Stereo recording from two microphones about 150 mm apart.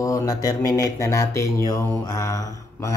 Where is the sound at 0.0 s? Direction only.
20° left (ahead or behind).